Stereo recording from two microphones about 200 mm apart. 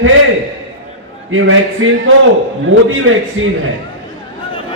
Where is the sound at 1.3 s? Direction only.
80° right.